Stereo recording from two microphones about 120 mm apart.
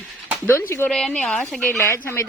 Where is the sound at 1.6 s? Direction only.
20° left (ahead or behind).